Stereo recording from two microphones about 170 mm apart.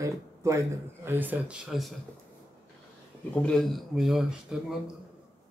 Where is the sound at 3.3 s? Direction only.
Centre (ahead or behind).